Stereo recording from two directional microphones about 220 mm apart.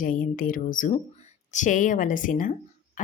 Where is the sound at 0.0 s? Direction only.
40° left (ahead or behind).